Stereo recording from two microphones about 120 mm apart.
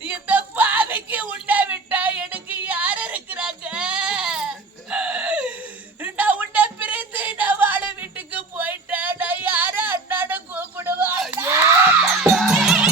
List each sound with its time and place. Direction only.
0.1 s a sound: 15° right (ahead or behind)
11.3 s screaming: 20° right (ahead or behind)
11.9 s music: 5° right (ahead or behind)